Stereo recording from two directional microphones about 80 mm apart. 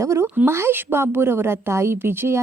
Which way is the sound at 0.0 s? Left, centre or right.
Right.